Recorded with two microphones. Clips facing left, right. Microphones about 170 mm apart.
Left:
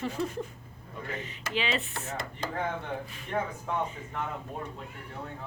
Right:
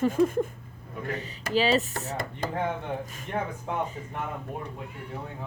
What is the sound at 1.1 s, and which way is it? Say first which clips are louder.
Speech: right 7 dB; 35° right (ahead or behind).